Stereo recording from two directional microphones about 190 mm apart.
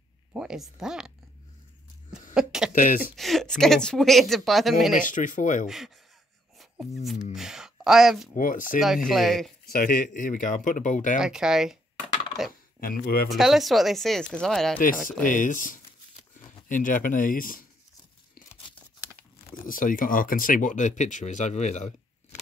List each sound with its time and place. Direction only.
0.3 s speech: 5° right (ahead or behind)
2.3 s a sound: 5° right (ahead or behind)
2.7 s speech: 45° left (ahead or behind)
3.2 s speech: centre (ahead or behind)
4.9 s speech: 45° left (ahead or behind)
7.3 s a sound: 5° right (ahead or behind)
8.4 s speech: 45° left (ahead or behind)
9.1 s speech: centre (ahead or behind)
9.7 s speech: 50° left (ahead or behind)
11.1 s speech: 5° right (ahead or behind)
12.8 s speech: 50° left (ahead or behind)
13.3 s speech: centre (ahead or behind)
15.2 s speech: 45° left (ahead or behind)
19.6 s speech: 45° left (ahead or behind)